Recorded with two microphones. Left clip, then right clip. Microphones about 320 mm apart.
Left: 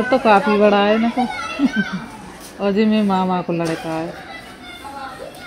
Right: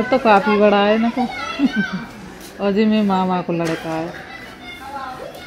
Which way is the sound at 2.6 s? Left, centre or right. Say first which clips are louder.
Even; centre.